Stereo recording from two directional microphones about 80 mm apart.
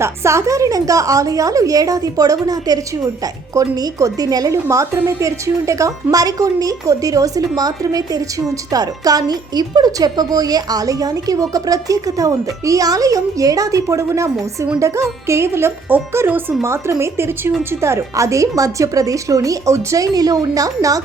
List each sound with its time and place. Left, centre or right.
0.0 s a woman's voice: right
4.5 s a woman's voice: right